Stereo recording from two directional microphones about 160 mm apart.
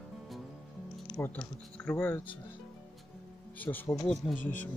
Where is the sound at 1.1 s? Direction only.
10° left (ahead or behind).